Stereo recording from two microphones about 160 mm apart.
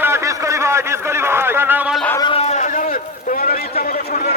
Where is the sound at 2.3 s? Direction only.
40° left (ahead or behind); by 4.2 s 60° left (ahead or behind).